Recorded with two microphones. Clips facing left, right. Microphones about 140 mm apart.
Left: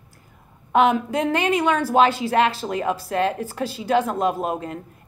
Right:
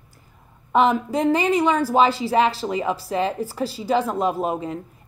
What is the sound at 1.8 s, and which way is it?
A woman's voice, 10° right (ahead or behind).